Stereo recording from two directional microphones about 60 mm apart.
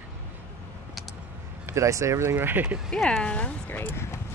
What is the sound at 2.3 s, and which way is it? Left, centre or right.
Speech, right.